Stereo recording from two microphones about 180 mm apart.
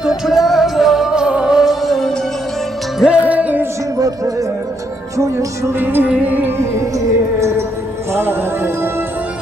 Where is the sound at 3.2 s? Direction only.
10° right (ahead or behind).